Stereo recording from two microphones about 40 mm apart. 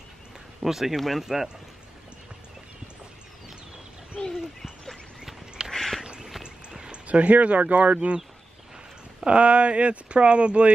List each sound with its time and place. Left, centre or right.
0.6 s speech: centre
4.2 s speech: centre
5.7 s duck: centre
6.0 s a sound: centre
6.4 s clip-clop: centre
7.1 s speech: right
9.2 s speech: right